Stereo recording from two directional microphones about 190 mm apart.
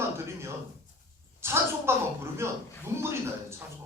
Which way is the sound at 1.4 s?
15° right (ahead or behind).